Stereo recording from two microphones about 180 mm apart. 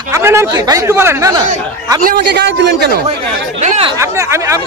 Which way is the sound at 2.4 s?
70° right (ahead or behind).